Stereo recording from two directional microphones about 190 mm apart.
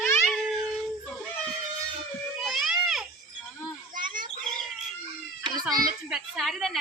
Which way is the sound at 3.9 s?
45° right (ahead or behind).